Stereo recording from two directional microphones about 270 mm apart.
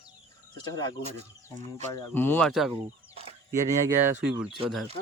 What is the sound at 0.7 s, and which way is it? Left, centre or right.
Speech, centre.